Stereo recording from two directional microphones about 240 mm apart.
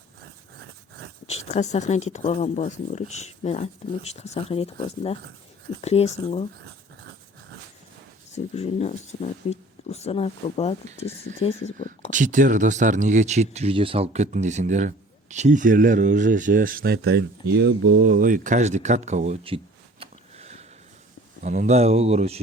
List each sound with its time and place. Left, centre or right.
1.3 s speech: left
8.3 s speech: left
12.1 s speech: right